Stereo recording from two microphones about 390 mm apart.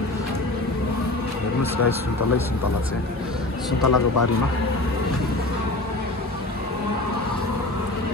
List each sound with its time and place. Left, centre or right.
3.8 s speech: left